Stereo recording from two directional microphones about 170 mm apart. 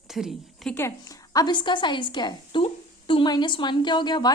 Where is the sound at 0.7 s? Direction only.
15° left (ahead or behind).